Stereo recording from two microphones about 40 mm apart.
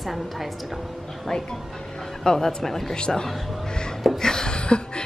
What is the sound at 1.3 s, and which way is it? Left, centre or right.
Speech, centre.